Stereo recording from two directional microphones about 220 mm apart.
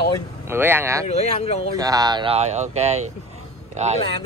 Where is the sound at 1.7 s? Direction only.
15° right (ahead or behind).